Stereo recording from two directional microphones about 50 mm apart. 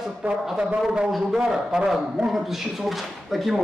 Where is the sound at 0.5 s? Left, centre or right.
Centre.